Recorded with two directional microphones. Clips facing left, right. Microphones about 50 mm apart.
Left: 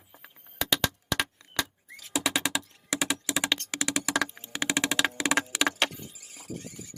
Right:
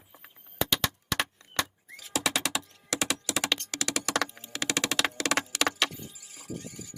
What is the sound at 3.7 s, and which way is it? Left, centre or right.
Computer keyboard, left.